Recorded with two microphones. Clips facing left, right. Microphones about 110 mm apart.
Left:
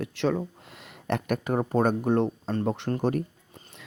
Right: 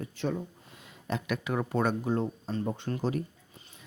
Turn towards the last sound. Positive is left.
turn(degrees=45)  # may be behind; listen again after turning